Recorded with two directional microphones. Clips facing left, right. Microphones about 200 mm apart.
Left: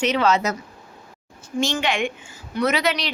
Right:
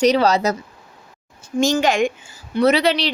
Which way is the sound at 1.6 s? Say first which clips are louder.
Right 6 dB; 45° right (ahead or behind).